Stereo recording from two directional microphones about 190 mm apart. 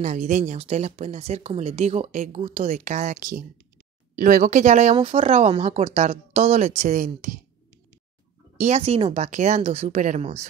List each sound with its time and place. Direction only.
0.0 s speech: 40° right (ahead or behind)
8.5 s speech: 35° right (ahead or behind)